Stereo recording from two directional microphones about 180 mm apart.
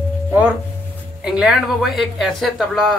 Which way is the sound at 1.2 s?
5° right (ahead or behind).